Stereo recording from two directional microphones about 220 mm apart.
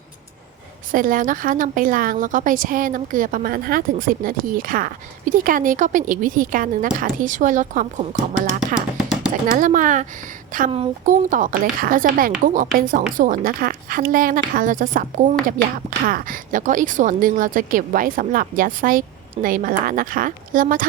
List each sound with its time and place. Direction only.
0.9 s a woman's voice: 40° right (ahead or behind)